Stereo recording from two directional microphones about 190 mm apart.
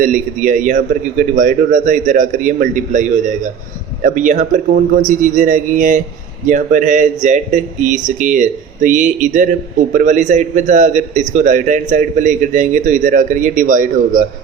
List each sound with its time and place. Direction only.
0.0 s a man's voice: 45° right (ahead or behind)